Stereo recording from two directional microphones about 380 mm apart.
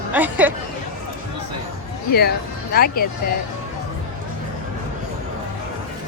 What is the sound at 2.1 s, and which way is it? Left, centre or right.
Speech, left.